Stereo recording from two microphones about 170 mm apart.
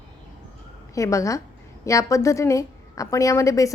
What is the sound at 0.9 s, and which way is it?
A woman's voice, 20° left (ahead or behind).